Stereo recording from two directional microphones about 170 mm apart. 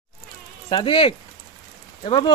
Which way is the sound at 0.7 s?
30° left (ahead or behind).